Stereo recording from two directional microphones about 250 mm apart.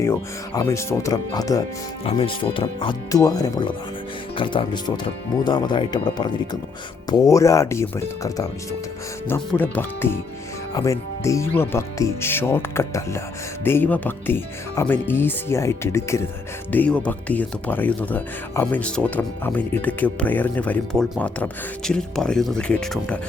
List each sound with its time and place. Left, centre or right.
0.0 s speech: centre